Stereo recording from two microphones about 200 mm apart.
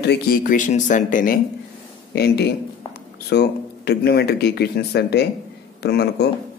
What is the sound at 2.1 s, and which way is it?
Speech, 55° left (ahead or behind).